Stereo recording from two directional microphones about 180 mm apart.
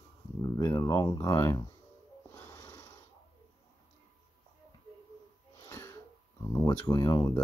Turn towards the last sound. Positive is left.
turn(degrees=20)  # may be behind; listen again after turning